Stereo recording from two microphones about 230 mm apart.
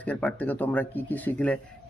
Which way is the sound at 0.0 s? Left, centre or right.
Centre.